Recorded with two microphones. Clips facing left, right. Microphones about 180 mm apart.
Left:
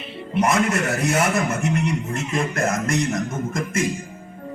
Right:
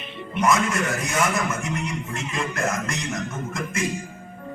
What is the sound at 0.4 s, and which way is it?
Speech, 60° left (ahead or behind).